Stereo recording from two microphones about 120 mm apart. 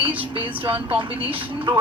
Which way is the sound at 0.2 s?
45° right (ahead or behind).